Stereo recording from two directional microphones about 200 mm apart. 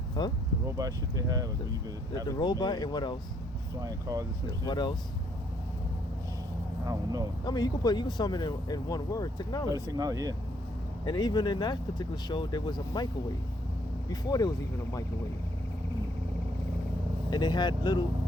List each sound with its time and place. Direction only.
0.2 s speech: 20° left (ahead or behind)
0.8 s speech: 15° right (ahead or behind)
2.2 s speech: 20° left (ahead or behind)
3.8 s speech: 15° right (ahead or behind)
4.6 s speech: 20° left (ahead or behind)
6.8 s speech: 15° right (ahead or behind)
7.4 s speech: 20° left (ahead or behind)
9.9 s speech: 20° right (ahead or behind)
11.0 s speech: 20° left (ahead or behind)
14.1 s speech: 20° left (ahead or behind)
17.3 s speech: 20° left (ahead or behind)